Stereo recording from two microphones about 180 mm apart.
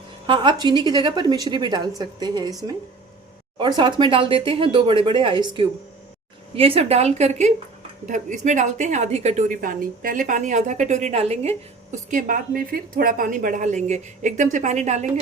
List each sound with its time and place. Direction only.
0.3 s a woman's voice: 25° right (ahead or behind)